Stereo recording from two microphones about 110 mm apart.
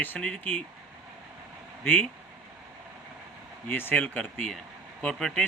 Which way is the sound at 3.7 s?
15° left (ahead or behind).